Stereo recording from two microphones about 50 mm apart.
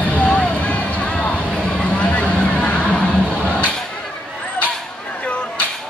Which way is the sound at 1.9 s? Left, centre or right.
Left.